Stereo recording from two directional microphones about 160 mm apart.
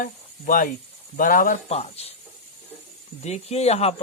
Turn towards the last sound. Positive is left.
turn(degrees=40)  # may be behind; listen again after turning